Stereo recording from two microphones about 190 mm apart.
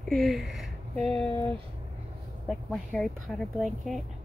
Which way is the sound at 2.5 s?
Centre (ahead or behind).